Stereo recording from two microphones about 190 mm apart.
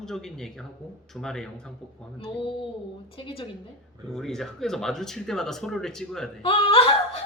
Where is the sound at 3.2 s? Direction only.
30° left (ahead or behind).